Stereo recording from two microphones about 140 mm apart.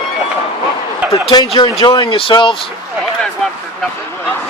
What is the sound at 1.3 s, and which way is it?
Speech, 40° left (ahead or behind).